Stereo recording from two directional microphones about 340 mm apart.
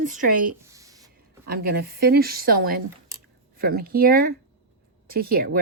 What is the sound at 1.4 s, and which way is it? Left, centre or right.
Speech, right.